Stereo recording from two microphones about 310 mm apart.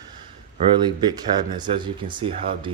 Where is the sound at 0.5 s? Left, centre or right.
Centre.